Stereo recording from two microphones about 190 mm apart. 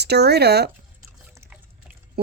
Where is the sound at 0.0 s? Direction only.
60° right (ahead or behind).